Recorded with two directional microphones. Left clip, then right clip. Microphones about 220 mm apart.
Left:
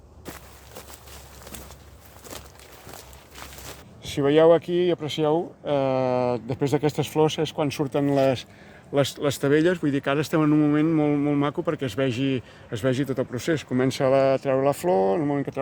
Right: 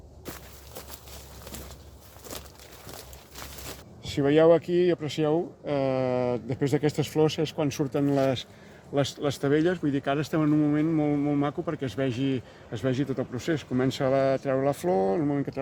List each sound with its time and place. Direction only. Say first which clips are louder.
3.3 s walk: left 1 dB; centre (ahead or behind)
4.0 s speech: left 3 dB; 35° left (ahead or behind)
8.9 s speech: left 4 dB; 45° left (ahead or behind)